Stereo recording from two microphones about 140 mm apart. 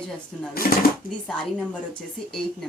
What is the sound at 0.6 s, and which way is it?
Speech, 90° left.